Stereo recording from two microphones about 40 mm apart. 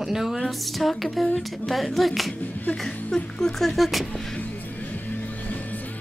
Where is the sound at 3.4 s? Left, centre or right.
Centre.